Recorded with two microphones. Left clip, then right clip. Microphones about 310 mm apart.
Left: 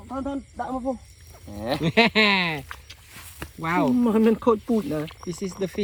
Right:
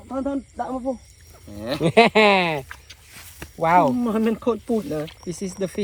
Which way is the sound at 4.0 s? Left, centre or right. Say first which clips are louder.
Left 2 dB; centre.